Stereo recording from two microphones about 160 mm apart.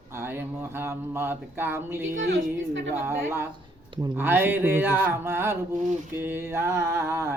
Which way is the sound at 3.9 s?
30° right (ahead or behind).